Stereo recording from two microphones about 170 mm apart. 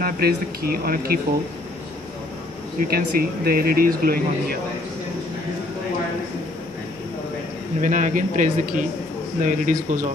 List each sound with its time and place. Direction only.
0.0 s speech: 60° right (ahead or behind)
2.9 s speech: 60° right (ahead or behind)
7.8 s speech: 50° right (ahead or behind)